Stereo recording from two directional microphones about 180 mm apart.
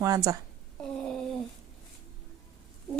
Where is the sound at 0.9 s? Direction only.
5° left (ahead or behind).